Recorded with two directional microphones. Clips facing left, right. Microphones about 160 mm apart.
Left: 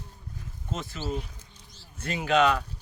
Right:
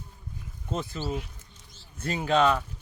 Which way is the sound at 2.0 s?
35° right (ahead or behind).